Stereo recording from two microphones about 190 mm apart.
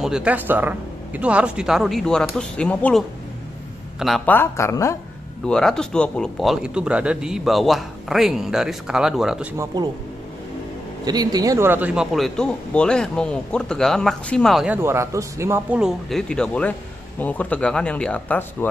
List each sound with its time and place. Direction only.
0.0 s speech: 5° right (ahead or behind)
4.3 s speech: 15° left (ahead or behind)
5.4 s speech: 5° left (ahead or behind)
11.1 s speech: 20° right (ahead or behind); by 14.8 s centre (ahead or behind)
14.8 s speech: 15° right (ahead or behind); by 18.7 s 5° left (ahead or behind)